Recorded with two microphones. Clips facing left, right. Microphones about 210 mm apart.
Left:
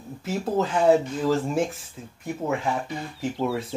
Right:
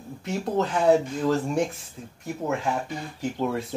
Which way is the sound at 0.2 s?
Centre (ahead or behind).